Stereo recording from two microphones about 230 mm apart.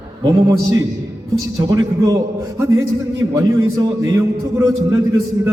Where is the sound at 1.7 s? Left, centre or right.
Centre.